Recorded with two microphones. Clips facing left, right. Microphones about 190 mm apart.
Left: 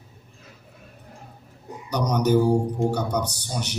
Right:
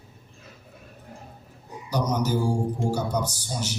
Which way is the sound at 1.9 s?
65° left (ahead or behind).